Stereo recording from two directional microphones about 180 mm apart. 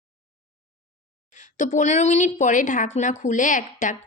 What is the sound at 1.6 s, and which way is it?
A woman's voice, 45° left (ahead or behind).